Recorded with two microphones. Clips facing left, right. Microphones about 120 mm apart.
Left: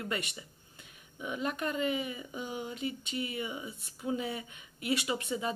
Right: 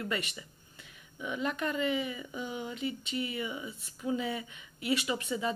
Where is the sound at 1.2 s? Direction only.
40° left (ahead or behind).